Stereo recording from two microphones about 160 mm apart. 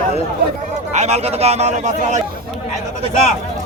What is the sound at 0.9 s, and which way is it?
A man's voice, 45° right (ahead or behind).